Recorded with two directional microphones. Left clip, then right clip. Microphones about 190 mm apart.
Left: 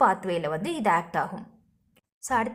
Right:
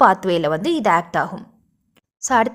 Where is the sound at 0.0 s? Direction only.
35° right (ahead or behind).